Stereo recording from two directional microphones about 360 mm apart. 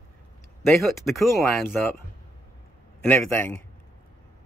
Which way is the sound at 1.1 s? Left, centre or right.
Centre.